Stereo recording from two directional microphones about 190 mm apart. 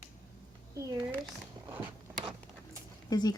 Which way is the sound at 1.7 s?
10° right (ahead or behind).